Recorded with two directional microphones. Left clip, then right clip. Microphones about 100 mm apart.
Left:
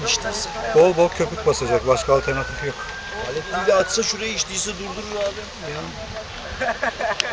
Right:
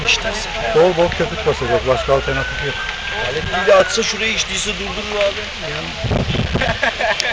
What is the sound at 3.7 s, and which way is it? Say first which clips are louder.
A man's voice: right 6 dB; 40° left (ahead or behind).